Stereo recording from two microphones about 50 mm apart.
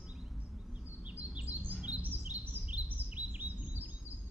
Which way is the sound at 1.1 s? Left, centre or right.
Right.